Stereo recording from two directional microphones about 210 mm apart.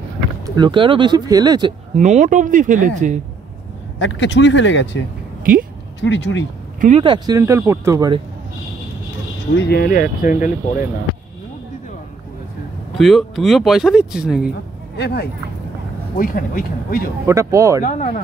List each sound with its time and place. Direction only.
0.6 s speech: 25° right (ahead or behind)
2.0 s speech: 35° right (ahead or behind)
4.0 s speech: 60° left (ahead or behind)
5.4 s a sound: 40° right (ahead or behind)
5.9 s speech: 60° left (ahead or behind)
6.8 s speech: 30° right (ahead or behind)
9.6 s speech: 50° left (ahead or behind)
12.9 s speech: centre (ahead or behind)
15.0 s speech: 50° left (ahead or behind)
17.3 s speech: 15° right (ahead or behind)
17.8 s speech: 35° left (ahead or behind)